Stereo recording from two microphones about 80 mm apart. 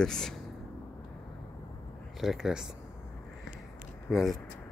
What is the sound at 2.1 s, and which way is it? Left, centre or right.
Speech, centre.